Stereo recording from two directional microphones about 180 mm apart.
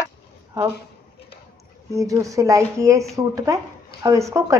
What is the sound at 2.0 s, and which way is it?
A woman's voice, 20° right (ahead or behind).